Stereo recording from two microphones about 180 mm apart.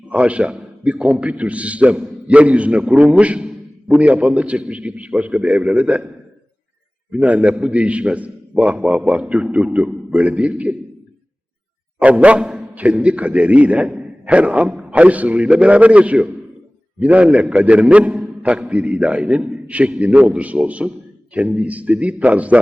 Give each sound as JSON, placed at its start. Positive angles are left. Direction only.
{"t": 0.1, "sound": "a man's voice", "side_deg": -5}
{"t": 7.1, "sound": "a man's voice", "side_deg": -5}
{"t": 11.9, "sound": "a man's voice", "side_deg": -5}